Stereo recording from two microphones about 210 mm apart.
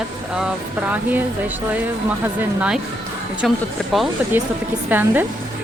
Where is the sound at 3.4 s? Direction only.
Centre (ahead or behind).